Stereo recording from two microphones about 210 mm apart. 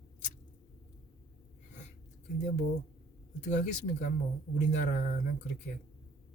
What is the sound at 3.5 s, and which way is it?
Speech, 35° left (ahead or behind).